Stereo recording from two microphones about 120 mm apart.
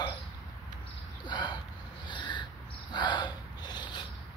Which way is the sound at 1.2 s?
40° left (ahead or behind).